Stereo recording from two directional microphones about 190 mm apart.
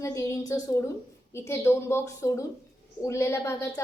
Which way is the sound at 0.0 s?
15° left (ahead or behind).